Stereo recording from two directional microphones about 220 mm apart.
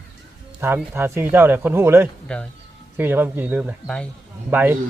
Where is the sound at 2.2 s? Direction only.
5° left (ahead or behind).